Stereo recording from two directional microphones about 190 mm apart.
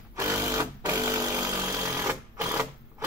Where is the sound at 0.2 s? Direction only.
15° right (ahead or behind).